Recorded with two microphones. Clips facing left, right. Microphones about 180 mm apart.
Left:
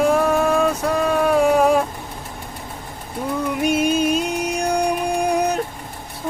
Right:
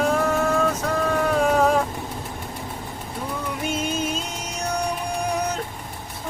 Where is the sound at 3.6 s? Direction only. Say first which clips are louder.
Left 8 dB; 15° left (ahead or behind).